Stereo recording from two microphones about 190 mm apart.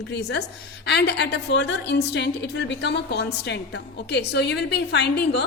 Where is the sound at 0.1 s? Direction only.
60° left (ahead or behind).